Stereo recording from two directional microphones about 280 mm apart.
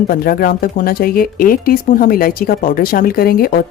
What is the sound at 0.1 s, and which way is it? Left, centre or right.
Speech, left.